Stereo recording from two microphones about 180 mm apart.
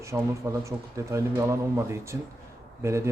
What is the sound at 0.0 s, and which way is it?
A man's voice, 15° right (ahead or behind).